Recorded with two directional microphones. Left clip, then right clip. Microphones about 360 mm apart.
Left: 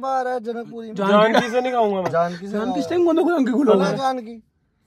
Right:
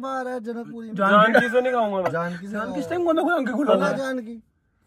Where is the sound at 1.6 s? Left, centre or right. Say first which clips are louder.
Left 2 dB; left.